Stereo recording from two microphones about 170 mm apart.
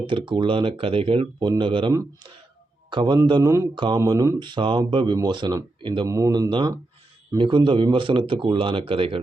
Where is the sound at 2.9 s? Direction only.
25° right (ahead or behind).